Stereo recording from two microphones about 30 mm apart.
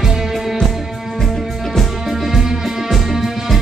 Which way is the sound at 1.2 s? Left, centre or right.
Centre.